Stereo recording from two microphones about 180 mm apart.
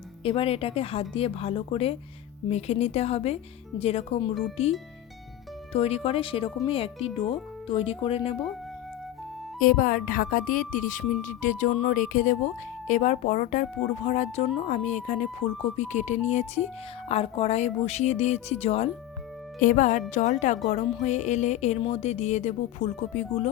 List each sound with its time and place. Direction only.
0.2 s speech: 30° left (ahead or behind)
5.7 s speech: 35° left (ahead or behind)
9.6 s a woman's voice: 50° left (ahead or behind)
19.5 s a woman's voice: 45° left (ahead or behind)